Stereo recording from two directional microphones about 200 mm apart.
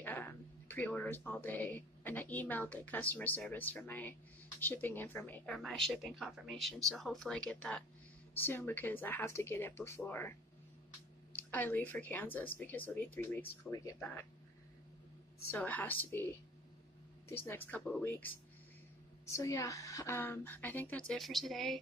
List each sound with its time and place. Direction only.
0.0 s speech: 10° left (ahead or behind)
11.3 s speech: 10° left (ahead or behind)
15.5 s speech: 10° left (ahead or behind)